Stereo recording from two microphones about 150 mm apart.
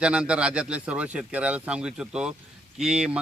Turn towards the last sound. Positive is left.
turn(degrees=-5)  # may be behind; listen again after turning